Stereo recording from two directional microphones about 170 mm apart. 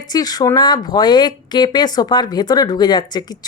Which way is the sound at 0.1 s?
25° left (ahead or behind).